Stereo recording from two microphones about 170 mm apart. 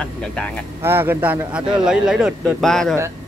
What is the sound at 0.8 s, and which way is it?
Speech, 15° right (ahead or behind).